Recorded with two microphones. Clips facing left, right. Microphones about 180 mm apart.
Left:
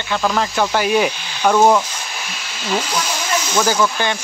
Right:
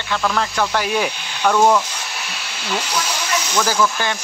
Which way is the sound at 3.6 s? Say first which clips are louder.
Left 1 dB; centre (ahead or behind).